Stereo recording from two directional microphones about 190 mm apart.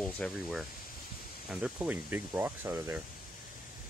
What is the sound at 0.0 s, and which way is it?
Speech, centre (ahead or behind).